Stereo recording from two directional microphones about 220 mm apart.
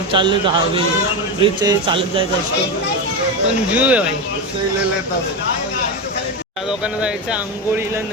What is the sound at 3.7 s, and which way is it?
Speech, 5° right (ahead or behind).